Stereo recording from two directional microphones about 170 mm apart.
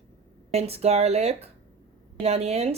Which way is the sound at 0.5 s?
35° right (ahead or behind).